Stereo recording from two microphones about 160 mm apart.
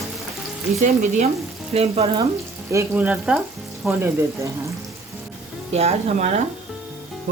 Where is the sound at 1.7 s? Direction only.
40° right (ahead or behind).